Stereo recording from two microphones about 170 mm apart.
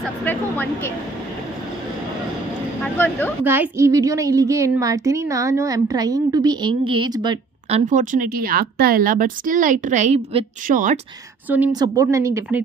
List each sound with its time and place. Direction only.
0.2 s a sound: 10° left (ahead or behind)
2.8 s speech: 10° left (ahead or behind)
3.4 s a woman's voice: 15° right (ahead or behind)
7.7 s a woman's voice: 50° right (ahead or behind)
11.4 s a woman's voice: 10° right (ahead or behind)
11.7 s a woman's voice: 20° right (ahead or behind)